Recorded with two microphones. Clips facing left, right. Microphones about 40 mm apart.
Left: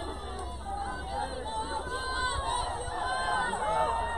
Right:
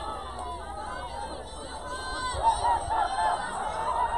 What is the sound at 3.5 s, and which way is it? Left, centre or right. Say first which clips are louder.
Chatter: left 1 dB; left.